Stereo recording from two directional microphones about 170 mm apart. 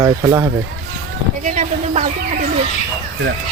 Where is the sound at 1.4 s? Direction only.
50° right (ahead or behind).